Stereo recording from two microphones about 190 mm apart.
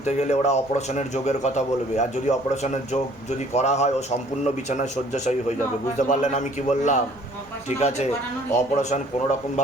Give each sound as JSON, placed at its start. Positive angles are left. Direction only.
{"t": 0.0, "sound": "a man's voice", "side_deg": 35}